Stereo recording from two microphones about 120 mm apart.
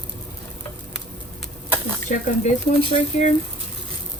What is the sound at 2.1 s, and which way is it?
Speech, 90° left.